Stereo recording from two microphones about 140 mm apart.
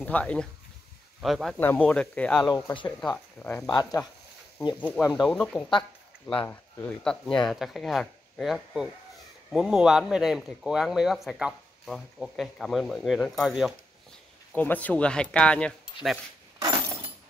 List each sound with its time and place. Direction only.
0.0 s speech: 10° left (ahead or behind)
1.6 s speech: 15° left (ahead or behind)
2.5 s speech: 35° left (ahead or behind)
3.4 s speech: 5° left (ahead or behind)
4.7 s speech: 10° left (ahead or behind)
5.0 s speech: 30° left (ahead or behind)
5.3 s speech: 5° left (ahead or behind)
7.1 s speech: 5° left (ahead or behind)
14.5 s speech: 10° left (ahead or behind)
16.6 s breaking: 25° right (ahead or behind)